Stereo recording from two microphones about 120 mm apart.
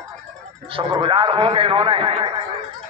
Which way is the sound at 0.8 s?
45° right (ahead or behind).